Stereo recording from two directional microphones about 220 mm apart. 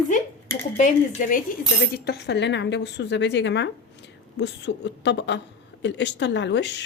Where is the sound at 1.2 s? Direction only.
35° left (ahead or behind).